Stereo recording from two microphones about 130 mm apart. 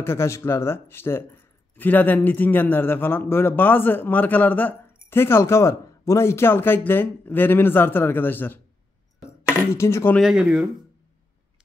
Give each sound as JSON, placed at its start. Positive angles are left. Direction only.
{"t": 0.0, "sound": "speech", "side_deg": 20}
{"t": 9.2, "sound": "a sound", "side_deg": 20}
{"t": 9.8, "sound": "speech", "side_deg": 20}
{"t": 10.1, "sound": "speech", "side_deg": -5}